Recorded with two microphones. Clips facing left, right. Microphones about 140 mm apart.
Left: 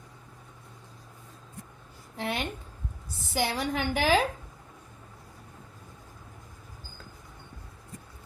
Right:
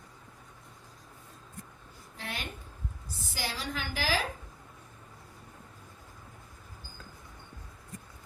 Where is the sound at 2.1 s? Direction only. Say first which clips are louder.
Left 8 dB; 65° left (ahead or behind).